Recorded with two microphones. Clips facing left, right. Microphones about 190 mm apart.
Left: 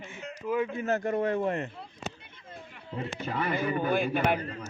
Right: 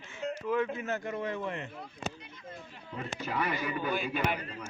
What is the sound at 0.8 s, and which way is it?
Speech, 40° left (ahead or behind).